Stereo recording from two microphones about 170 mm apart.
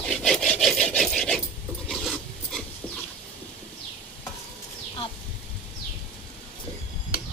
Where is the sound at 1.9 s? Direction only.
Centre (ahead or behind).